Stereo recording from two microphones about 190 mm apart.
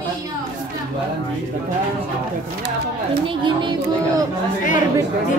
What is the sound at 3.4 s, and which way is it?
Speech, 25° right (ahead or behind).